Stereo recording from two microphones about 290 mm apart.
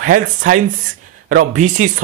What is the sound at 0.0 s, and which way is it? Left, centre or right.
A man's voice, right.